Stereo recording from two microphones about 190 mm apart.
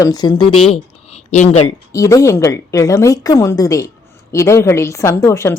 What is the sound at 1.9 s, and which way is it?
A woman's voice, 15° left (ahead or behind).